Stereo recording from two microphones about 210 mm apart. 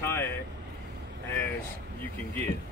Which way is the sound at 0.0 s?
10° left (ahead or behind).